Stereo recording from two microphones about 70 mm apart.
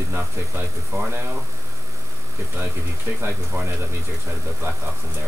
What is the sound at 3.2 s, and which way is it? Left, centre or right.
Speech, right.